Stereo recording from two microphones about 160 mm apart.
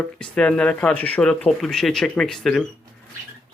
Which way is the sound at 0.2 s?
5° left (ahead or behind).